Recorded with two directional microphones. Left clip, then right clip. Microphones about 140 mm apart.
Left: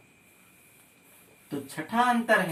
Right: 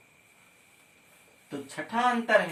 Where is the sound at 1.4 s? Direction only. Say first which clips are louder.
Left 1 dB; centre (ahead or behind).